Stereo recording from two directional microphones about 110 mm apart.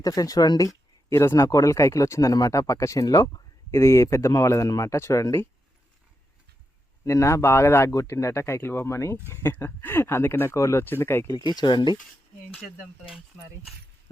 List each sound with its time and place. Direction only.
0.0 s speech: 35° left (ahead or behind)
7.0 s speech: 25° left (ahead or behind)
11.3 s speech: 40° left (ahead or behind)
12.8 s speech: 5° right (ahead or behind)